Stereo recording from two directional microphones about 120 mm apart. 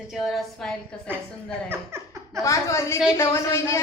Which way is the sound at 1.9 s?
20° right (ahead or behind).